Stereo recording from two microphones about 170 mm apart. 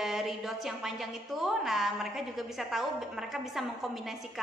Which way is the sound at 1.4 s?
Centre (ahead or behind).